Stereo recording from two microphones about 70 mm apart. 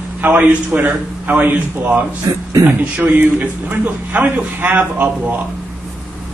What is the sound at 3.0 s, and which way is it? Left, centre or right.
A man's voice, right.